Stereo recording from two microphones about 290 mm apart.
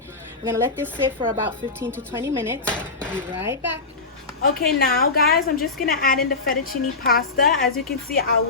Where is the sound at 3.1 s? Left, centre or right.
Centre.